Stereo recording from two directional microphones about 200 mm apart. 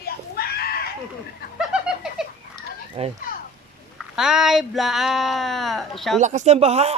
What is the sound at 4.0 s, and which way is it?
Speech, 5° right (ahead or behind).